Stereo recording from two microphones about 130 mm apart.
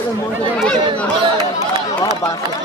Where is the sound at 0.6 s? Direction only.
10° left (ahead or behind).